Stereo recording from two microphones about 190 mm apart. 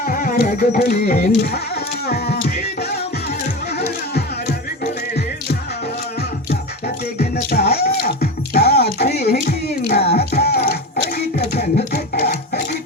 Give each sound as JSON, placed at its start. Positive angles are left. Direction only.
{"t": 0.0, "sound": "music", "side_deg": 45}
{"t": 6.5, "sound": "music", "side_deg": 55}
{"t": 10.0, "sound": "music", "side_deg": 35}
{"t": 10.3, "sound": "music", "side_deg": 60}
{"t": 11.3, "sound": "a sound", "side_deg": 55}